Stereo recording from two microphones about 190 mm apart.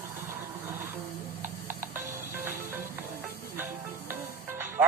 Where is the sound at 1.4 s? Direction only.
45° right (ahead or behind).